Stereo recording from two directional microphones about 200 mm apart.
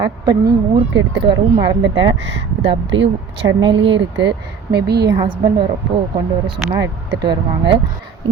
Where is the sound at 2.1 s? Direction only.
65° right (ahead or behind).